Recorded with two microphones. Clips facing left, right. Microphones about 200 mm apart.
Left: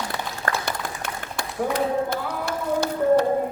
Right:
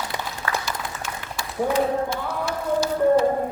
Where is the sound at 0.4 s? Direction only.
60° left (ahead or behind).